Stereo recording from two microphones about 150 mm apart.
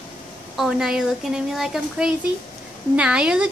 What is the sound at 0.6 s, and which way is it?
A child's voice, 5° right (ahead or behind).